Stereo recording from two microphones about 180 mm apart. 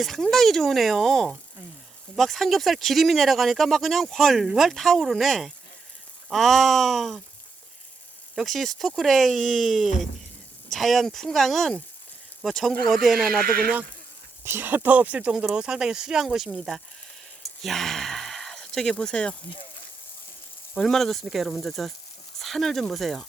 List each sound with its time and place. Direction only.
0.0 s speech: centre (ahead or behind)
8.4 s speech: centre (ahead or behind)
13.2 s speech: 55° right (ahead or behind)
14.4 s speech: 10° right (ahead or behind); by 19.4 s 5° left (ahead or behind)
20.7 s speech: centre (ahead or behind)